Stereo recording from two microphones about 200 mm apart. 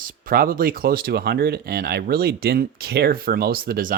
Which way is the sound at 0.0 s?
45° right (ahead or behind).